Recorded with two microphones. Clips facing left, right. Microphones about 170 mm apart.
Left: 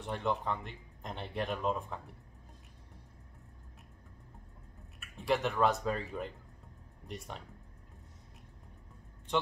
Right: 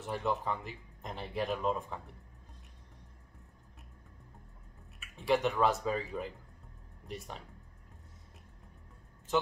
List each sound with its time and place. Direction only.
0.0 s speech: centre (ahead or behind)
5.0 s speech: centre (ahead or behind)